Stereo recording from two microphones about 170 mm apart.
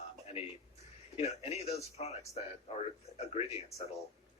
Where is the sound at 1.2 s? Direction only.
40° left (ahead or behind).